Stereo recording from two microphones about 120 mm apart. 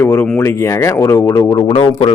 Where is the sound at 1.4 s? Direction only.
40° left (ahead or behind).